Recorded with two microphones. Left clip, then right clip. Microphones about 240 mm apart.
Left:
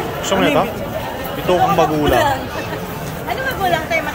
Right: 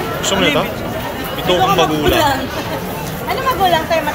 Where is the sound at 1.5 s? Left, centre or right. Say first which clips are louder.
Right 1 dB; centre.